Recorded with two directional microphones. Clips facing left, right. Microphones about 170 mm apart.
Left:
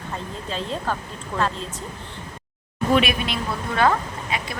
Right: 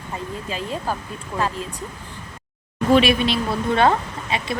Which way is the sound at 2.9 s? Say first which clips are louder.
Right 5 dB; 30° right (ahead or behind).